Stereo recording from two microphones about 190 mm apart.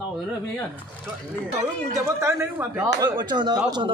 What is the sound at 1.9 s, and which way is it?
A man's voice, 15° right (ahead or behind).